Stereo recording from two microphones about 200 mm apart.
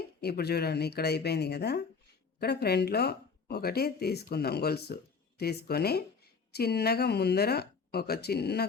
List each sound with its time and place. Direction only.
0.2 s speech: 55° left (ahead or behind)